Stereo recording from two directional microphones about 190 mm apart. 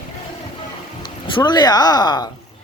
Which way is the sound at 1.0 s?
25° left (ahead or behind).